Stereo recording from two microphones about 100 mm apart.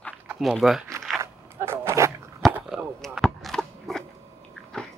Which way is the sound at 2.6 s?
5° right (ahead or behind).